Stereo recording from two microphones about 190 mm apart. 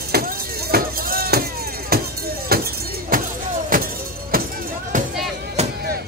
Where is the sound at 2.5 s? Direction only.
55° right (ahead or behind).